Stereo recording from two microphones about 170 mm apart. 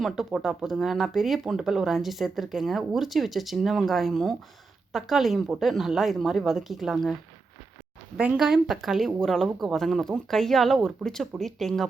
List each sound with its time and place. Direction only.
0.0 s speech: centre (ahead or behind)